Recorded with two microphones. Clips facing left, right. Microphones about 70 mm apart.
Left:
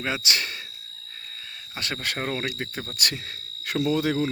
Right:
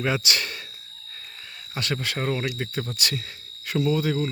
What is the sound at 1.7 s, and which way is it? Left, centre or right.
Speech, left.